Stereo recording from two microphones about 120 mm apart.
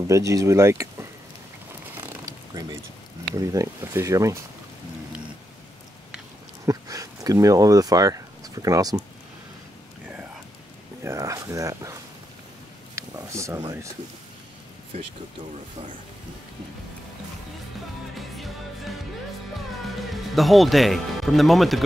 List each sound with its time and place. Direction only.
0.0 s speech: 25° right (ahead or behind)
2.0 s a sound: 25° right (ahead or behind)
3.3 s speech: 25° right (ahead or behind)
6.6 s speech: 30° right (ahead or behind)
11.1 s speech: 25° right (ahead or behind)
12.9 s a sound: 25° right (ahead or behind)
18.3 s music: centre (ahead or behind)
20.0 s speech: centre (ahead or behind)